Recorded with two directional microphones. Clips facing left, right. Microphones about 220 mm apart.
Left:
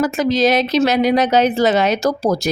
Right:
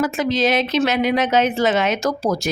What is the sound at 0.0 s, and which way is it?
Speech, 40° left (ahead or behind).